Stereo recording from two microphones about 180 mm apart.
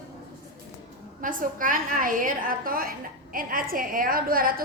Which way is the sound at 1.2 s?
50° right (ahead or behind).